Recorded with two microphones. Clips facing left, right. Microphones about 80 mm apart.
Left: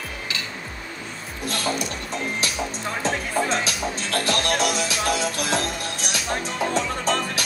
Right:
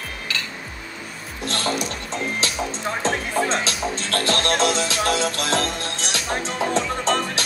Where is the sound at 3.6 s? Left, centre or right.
Centre.